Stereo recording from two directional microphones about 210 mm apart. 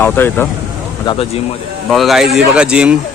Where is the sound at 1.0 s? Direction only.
30° left (ahead or behind).